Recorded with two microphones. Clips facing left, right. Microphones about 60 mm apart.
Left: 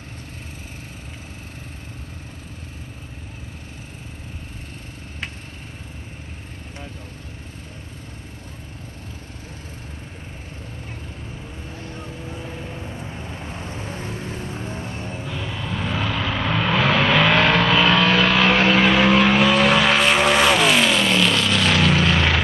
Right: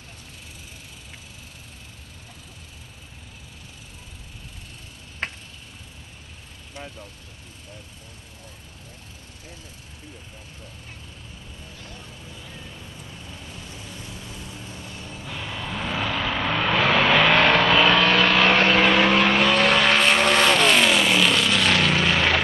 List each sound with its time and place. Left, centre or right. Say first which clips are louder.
11.8 s vehicle: left 9 dB; left
15.2 s vehicle: even; centre